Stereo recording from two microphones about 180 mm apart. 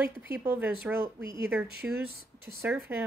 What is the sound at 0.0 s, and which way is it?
Speech, 10° right (ahead or behind).